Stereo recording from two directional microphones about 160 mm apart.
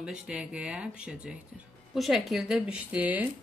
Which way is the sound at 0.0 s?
5° right (ahead or behind).